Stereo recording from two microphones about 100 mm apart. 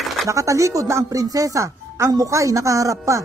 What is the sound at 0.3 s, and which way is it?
Speech, 30° right (ahead or behind).